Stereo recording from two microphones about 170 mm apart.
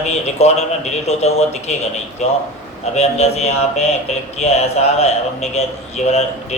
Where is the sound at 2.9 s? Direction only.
40° left (ahead or behind).